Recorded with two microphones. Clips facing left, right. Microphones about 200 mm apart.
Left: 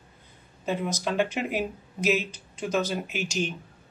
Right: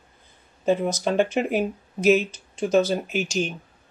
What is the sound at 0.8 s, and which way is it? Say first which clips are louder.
Speech: right 5 dB; 45° right (ahead or behind).